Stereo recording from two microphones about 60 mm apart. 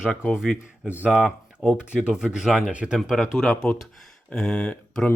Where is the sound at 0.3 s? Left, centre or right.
Centre.